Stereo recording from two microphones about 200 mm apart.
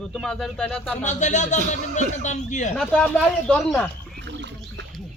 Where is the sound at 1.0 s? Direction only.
35° left (ahead or behind).